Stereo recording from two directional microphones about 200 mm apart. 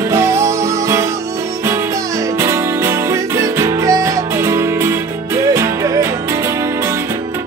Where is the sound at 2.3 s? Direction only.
15° right (ahead or behind).